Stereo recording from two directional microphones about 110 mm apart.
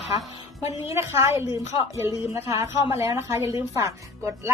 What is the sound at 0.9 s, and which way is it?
A woman's voice, 25° right (ahead or behind).